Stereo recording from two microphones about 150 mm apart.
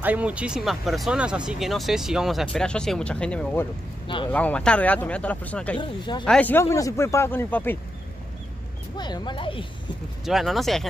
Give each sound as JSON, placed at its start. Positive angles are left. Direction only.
{"t": 0.0, "sound": "a man's voice", "side_deg": -10}
{"t": 5.8, "sound": "speech", "side_deg": 30}
{"t": 6.2, "sound": "a man's voice", "side_deg": 10}
{"t": 8.9, "sound": "speech", "side_deg": 30}
{"t": 10.2, "sound": "speech", "side_deg": 0}